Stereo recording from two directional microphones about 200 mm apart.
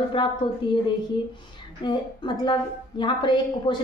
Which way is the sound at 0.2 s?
25° left (ahead or behind).